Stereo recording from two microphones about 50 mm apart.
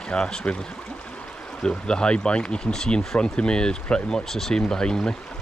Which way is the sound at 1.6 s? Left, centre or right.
Centre.